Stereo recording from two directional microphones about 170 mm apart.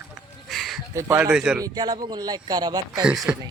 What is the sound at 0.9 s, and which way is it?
Speech, 15° right (ahead or behind).